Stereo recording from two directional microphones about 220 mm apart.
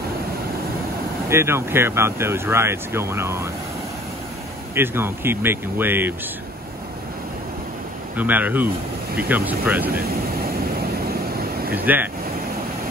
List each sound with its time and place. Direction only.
1.3 s speech: 10° right (ahead or behind)
4.7 s speech: 10° right (ahead or behind)
8.2 s speech: 5° right (ahead or behind)
9.8 s vehicle: 45° right (ahead or behind)
11.7 s speech: 10° right (ahead or behind)